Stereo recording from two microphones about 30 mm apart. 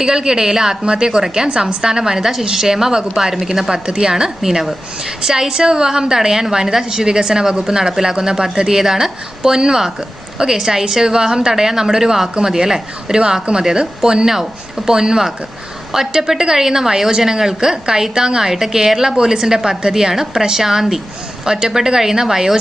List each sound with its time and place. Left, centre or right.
0.0 s a woman's voice: right
0.9 s a woman's voice: right
10.6 s a woman's voice: centre
14.3 s a woman's voice: centre
18.5 s a woman's voice: centre